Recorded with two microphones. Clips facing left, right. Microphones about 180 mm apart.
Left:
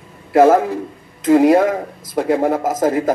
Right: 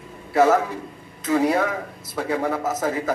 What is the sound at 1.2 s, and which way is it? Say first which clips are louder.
A man's voice: left 9 dB; 45° left (ahead or behind).